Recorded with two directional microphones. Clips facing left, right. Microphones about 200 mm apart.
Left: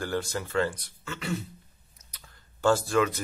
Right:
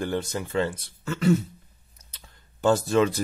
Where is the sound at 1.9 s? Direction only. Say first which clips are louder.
Right 1 dB; 25° right (ahead or behind).